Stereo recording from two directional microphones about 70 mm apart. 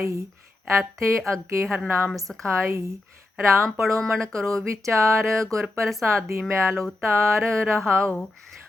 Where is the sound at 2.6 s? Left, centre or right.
Right.